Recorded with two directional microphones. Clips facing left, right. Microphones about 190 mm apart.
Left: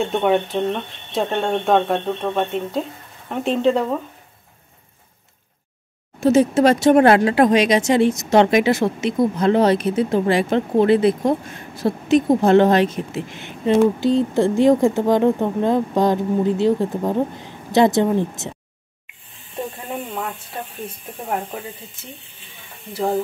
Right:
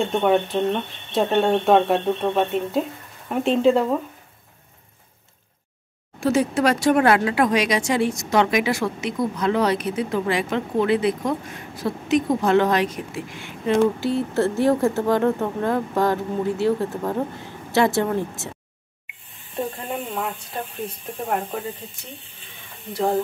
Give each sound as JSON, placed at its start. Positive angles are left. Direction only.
{"t": 0.0, "sound": "speech", "side_deg": 0}
{"t": 6.1, "sound": "a woman's voice", "side_deg": 20}
{"t": 22.9, "sound": "speech", "side_deg": 0}